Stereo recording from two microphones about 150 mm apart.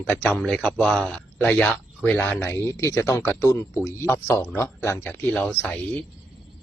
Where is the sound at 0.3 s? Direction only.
5° left (ahead or behind).